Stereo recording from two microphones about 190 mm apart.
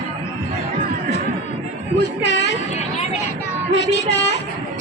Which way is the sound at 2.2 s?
65° left (ahead or behind).